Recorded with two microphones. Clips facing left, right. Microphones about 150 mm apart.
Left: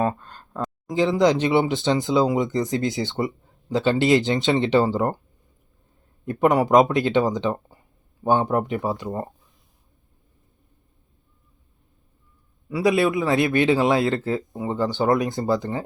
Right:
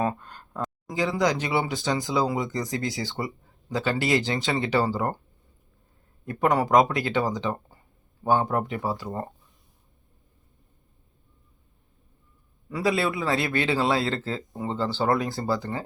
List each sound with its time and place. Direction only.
0.2 s a sound: 10° right (ahead or behind)
0.9 s speech: 25° left (ahead or behind)
6.2 s speech: 20° left (ahead or behind)
12.6 s a man's voice: 10° left (ahead or behind)